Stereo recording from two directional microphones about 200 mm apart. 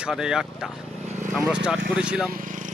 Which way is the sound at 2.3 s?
40° right (ahead or behind).